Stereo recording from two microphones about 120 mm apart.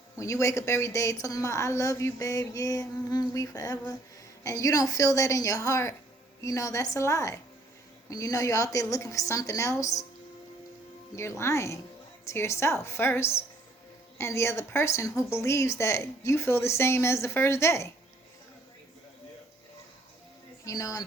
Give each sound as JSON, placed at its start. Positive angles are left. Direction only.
{"t": 0.2, "sound": "a woman's voice", "side_deg": 25}
{"t": 11.1, "sound": "a woman's voice", "side_deg": 25}
{"t": 20.7, "sound": "a woman's voice", "side_deg": 30}